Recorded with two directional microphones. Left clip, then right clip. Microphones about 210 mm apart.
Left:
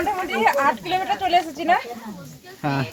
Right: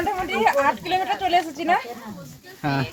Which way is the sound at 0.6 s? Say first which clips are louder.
Left 1 dB; centre (ahead or behind).